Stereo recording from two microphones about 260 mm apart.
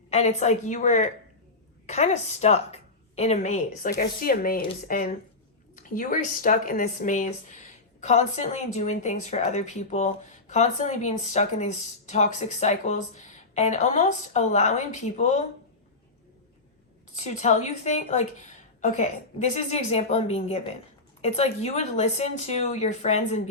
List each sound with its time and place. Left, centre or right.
0.1 s a woman's voice: left
17.2 s speech: left